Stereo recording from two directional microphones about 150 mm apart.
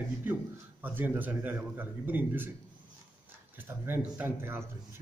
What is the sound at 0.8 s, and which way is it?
Speech, 10° right (ahead or behind).